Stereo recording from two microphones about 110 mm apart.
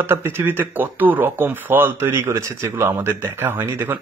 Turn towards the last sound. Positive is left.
turn(degrees=-20)  # may be behind; listen again after turning